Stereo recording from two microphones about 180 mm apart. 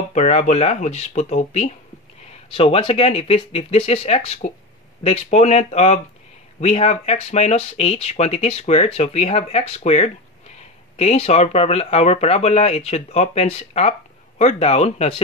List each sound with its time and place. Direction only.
0.1 s speech: 40° left (ahead or behind)